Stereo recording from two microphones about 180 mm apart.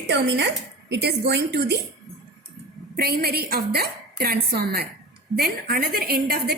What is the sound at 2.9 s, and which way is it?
A woman's voice, 60° right (ahead or behind).